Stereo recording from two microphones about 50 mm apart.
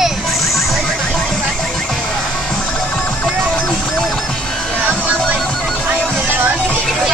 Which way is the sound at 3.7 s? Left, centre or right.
Centre.